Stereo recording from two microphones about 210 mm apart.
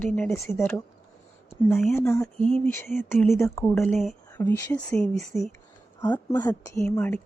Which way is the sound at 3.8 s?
Centre (ahead or behind).